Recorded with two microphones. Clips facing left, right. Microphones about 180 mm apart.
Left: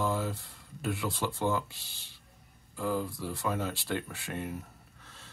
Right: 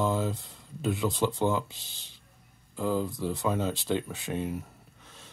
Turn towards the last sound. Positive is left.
turn(degrees=-15)  # may be behind; listen again after turning